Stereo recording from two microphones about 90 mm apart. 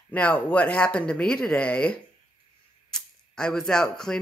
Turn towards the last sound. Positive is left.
turn(degrees=5)  # may be behind; listen again after turning